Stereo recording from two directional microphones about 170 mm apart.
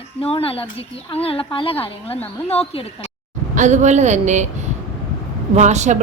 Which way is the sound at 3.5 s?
45° right (ahead or behind).